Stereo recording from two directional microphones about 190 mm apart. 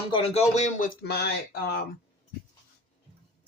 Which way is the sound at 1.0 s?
60° left (ahead or behind).